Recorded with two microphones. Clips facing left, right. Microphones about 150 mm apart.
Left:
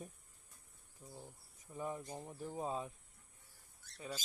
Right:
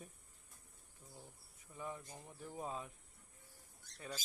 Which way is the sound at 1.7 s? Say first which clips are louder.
Left 5 dB; 30° left (ahead or behind).